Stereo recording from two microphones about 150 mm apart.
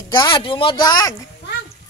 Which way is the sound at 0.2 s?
35° left (ahead or behind).